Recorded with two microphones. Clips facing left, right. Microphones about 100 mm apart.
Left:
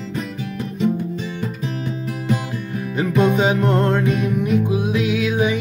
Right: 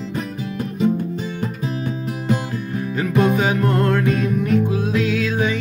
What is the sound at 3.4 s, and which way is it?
Music, 20° left (ahead or behind).